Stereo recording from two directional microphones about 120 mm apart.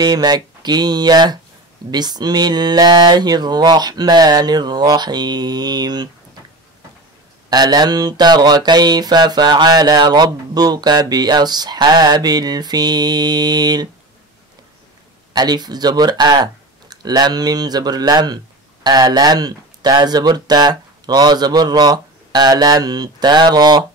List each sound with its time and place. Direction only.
0.0 s speech: 35° right (ahead or behind)
7.4 s speech: 35° right (ahead or behind)
15.3 s speech: 35° right (ahead or behind)